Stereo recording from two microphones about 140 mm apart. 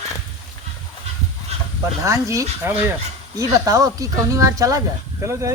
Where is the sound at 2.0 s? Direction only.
20° right (ahead or behind).